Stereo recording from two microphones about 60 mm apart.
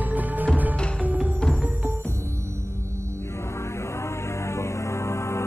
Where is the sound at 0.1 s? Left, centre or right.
Right.